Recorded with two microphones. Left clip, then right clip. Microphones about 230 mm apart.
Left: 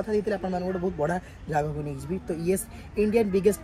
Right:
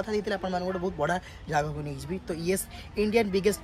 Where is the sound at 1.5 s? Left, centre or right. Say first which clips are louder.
Left 1 dB; centre.